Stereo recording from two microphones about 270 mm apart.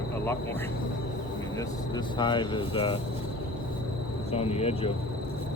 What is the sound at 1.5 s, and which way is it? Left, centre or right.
Speech, centre.